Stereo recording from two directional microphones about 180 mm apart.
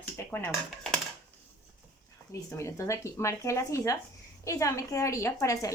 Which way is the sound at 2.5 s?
15° left (ahead or behind).